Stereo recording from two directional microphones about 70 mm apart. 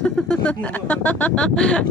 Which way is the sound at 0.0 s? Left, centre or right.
Centre.